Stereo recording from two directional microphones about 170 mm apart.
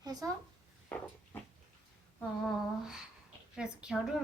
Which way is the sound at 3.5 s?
5° right (ahead or behind).